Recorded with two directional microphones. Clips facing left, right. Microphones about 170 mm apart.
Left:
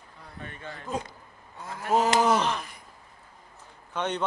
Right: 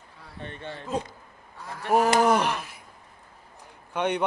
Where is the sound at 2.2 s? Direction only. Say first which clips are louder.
Right 2 dB; 10° right (ahead or behind).